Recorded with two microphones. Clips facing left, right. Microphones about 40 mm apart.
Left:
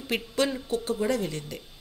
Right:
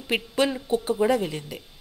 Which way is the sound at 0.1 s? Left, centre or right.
Centre.